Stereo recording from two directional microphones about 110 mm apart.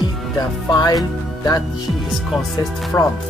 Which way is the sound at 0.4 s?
40° left (ahead or behind).